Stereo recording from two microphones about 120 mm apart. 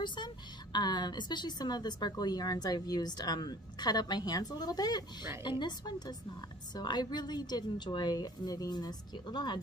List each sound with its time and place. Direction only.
0.0 s speech: 40° left (ahead or behind)